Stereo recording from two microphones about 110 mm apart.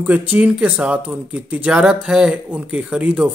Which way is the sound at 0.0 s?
15° right (ahead or behind).